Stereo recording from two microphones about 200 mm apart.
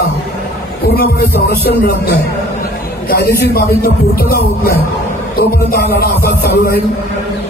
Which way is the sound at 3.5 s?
50° left (ahead or behind).